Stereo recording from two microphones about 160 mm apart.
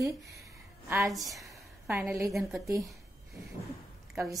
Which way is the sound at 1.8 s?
15° right (ahead or behind).